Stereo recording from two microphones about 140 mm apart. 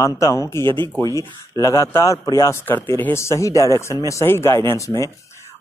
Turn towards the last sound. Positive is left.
turn(degrees=20)  # may be behind; listen again after turning